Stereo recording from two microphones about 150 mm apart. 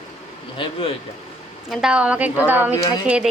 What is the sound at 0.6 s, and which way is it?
Speech, 40° left (ahead or behind).